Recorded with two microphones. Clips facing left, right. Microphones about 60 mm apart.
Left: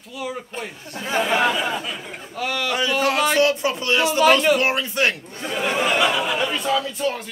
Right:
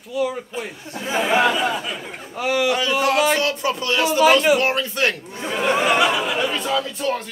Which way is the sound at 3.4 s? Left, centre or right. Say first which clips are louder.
Left 3 dB; centre.